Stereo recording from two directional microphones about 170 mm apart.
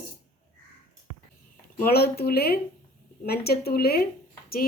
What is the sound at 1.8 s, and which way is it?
Speech, 65° left (ahead or behind).